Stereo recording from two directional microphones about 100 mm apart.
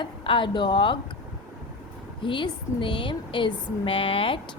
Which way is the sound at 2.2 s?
55° left (ahead or behind).